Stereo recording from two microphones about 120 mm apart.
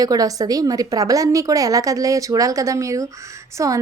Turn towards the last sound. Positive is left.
turn(degrees=-25)  # may be behind; listen again after turning